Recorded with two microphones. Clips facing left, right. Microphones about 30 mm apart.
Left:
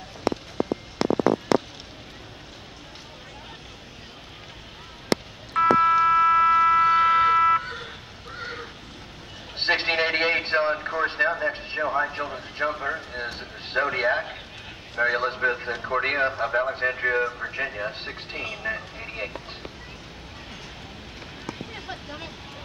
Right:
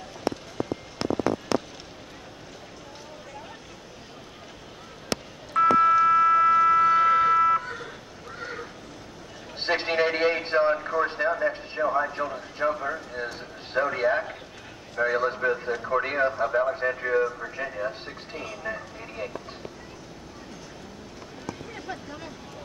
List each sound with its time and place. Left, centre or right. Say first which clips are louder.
0.2 s run: left 3 dB; left
1.0 s fireworks: left 4 dB; left
5.1 s a sound: left 2 dB; left
11.8 s a man's voice: right 1 dB; centre
18.8 s vehicle: left 2 dB; left
21.5 s boat: even; left